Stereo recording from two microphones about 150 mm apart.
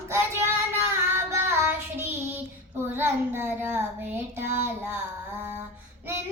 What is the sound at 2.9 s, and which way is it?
Child singing, 15° right (ahead or behind).